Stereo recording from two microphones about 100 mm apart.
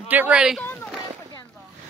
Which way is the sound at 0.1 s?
15° right (ahead or behind).